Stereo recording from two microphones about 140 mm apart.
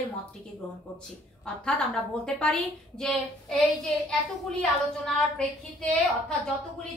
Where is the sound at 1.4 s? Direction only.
5° left (ahead or behind).